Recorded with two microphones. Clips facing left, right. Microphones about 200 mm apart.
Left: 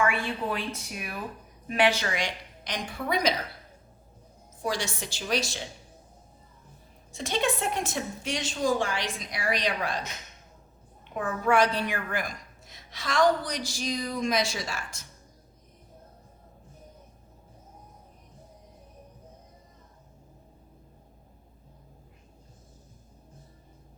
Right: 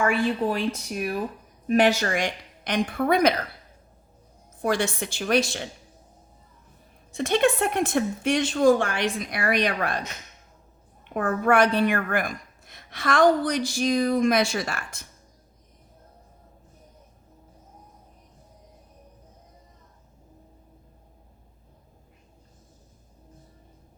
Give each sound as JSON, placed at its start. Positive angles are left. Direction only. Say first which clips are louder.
{"t": 0.5, "sound": "a woman's voice", "louder": "right 6 dB", "side_deg": -40}
{"t": 4.6, "sound": "speech", "louder": "right 6 dB", "side_deg": -55}
{"t": 7.1, "sound": "speech", "louder": "right 7 dB", "side_deg": -60}
{"t": 11.1, "sound": "speech", "louder": "right 4 dB", "side_deg": -60}